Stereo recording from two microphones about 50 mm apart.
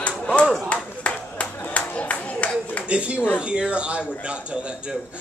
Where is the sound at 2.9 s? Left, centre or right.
Right.